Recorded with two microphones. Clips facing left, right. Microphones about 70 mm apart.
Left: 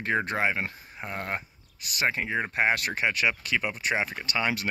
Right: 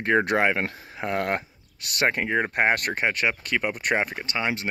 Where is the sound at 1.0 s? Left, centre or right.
Right.